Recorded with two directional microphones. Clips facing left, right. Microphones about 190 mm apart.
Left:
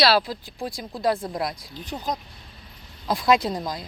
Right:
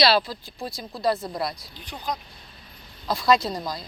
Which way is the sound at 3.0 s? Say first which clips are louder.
Left 1 dB; 15° left (ahead or behind).